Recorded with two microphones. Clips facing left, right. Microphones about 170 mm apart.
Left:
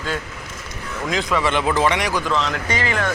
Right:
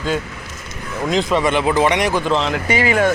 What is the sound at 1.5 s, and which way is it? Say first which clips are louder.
Speech: right 2 dB; 10° right (ahead or behind).